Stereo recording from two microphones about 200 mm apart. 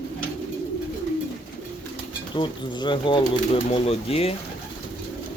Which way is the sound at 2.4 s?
25° left (ahead or behind).